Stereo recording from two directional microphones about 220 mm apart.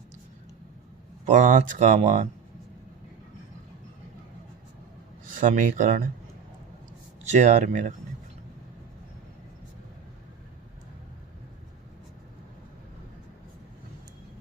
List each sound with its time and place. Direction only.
1.2 s speech: 35° right (ahead or behind)
5.3 s speech: 35° right (ahead or behind)
7.3 s speech: 35° right (ahead or behind)